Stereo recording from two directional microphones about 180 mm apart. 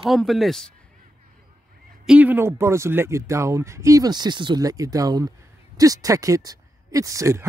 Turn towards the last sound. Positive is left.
turn(degrees=-15)  # may be behind; listen again after turning